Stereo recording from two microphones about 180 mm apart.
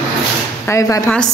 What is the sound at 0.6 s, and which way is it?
Speech, 15° left (ahead or behind).